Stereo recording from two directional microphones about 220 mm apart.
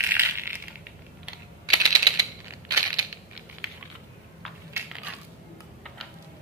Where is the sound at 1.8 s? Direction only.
15° right (ahead or behind).